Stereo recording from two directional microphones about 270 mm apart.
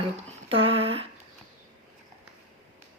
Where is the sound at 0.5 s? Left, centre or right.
Right.